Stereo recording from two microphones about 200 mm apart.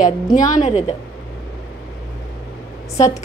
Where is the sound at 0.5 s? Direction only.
40° left (ahead or behind).